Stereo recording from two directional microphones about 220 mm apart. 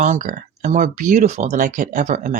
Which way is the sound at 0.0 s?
35° right (ahead or behind).